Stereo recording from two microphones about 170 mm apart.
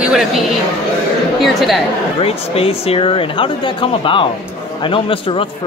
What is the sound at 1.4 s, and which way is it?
Speech, centre (ahead or behind).